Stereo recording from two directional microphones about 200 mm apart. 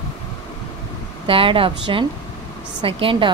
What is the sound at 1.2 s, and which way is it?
A woman's voice, 25° right (ahead or behind).